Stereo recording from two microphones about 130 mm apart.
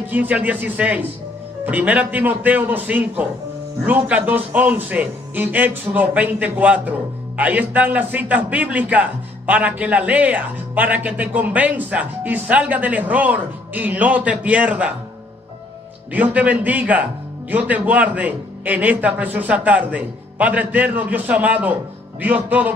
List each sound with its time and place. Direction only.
0.0 s a man's voice: 15° right (ahead or behind)
16.1 s a man's voice: 10° right (ahead or behind)